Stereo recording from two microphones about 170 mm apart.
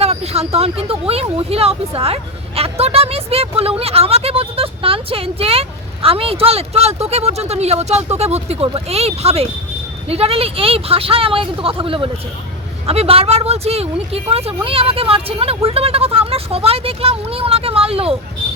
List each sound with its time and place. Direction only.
0.0 s speech: 35° right (ahead or behind)